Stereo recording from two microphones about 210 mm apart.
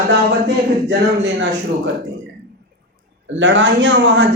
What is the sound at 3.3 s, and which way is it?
Speech, 60° right (ahead or behind).